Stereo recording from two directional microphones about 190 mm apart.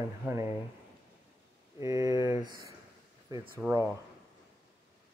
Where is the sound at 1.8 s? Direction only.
20° right (ahead or behind).